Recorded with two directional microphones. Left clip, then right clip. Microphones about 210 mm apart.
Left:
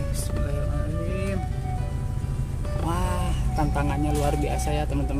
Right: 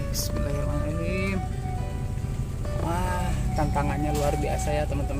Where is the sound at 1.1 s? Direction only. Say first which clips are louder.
Right 1 dB; 10° right (ahead or behind).